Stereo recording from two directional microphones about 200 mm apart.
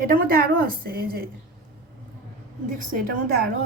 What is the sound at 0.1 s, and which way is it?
A woman's voice, 45° right (ahead or behind).